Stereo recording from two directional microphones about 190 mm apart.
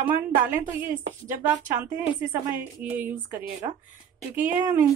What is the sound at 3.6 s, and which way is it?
Speech, 25° right (ahead or behind).